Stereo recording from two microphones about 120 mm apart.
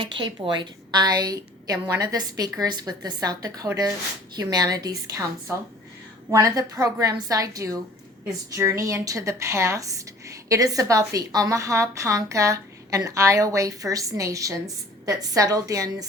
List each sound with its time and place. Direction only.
0.0 s a woman's voice: 40° right (ahead or behind)